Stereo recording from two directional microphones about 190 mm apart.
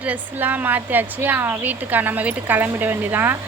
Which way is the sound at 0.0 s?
10° right (ahead or behind).